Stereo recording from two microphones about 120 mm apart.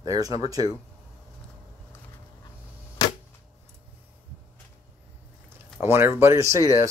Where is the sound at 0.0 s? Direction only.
30° right (ahead or behind).